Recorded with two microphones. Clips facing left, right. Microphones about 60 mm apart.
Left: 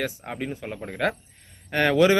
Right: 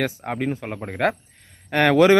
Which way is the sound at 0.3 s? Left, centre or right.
Right.